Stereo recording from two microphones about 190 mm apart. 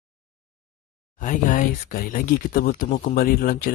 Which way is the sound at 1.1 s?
40° left (ahead or behind).